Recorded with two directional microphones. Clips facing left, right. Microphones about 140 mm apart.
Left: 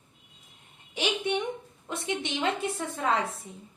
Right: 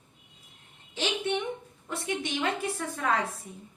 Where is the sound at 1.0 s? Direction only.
15° left (ahead or behind).